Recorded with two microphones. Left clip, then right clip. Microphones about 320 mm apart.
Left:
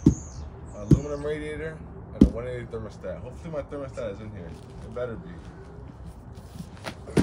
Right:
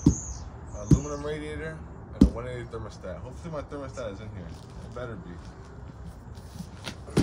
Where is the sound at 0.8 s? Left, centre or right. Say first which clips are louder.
Left 3 dB; centre.